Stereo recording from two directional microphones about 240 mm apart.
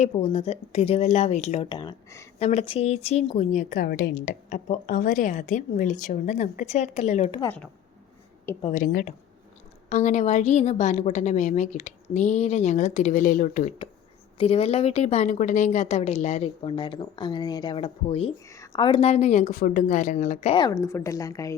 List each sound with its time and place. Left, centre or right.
0.0 s a woman's voice: left
2.4 s a woman's voice: left
8.6 s a woman's voice: left; by 21.5 s centre